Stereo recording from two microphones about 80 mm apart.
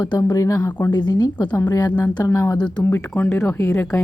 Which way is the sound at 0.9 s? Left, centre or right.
Left.